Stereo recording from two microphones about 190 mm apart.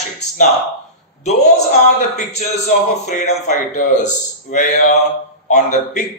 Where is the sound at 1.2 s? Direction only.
40° left (ahead or behind).